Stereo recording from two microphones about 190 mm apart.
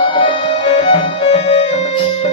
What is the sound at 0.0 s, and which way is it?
Music, 25° left (ahead or behind).